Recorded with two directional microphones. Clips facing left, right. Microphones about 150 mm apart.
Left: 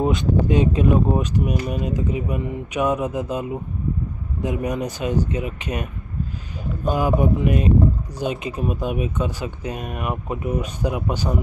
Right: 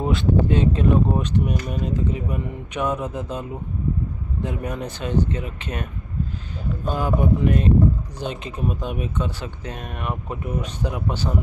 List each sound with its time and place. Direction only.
0.0 s speech: 15° left (ahead or behind)